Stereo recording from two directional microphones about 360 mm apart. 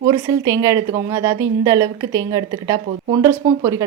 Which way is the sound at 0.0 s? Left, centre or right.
Centre.